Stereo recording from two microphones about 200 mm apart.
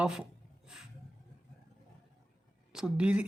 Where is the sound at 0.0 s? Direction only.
5° right (ahead or behind).